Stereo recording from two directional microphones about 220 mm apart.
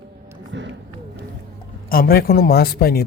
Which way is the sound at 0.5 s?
55° right (ahead or behind).